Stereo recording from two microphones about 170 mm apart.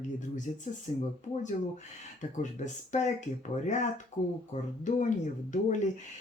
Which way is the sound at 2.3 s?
45° left (ahead or behind).